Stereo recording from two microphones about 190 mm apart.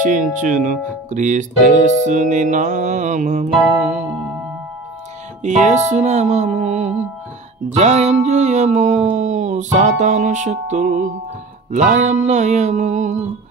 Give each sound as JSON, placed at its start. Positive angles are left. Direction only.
{"t": 0.0, "sound": "speech", "side_deg": -45}
{"t": 5.4, "sound": "speech", "side_deg": -40}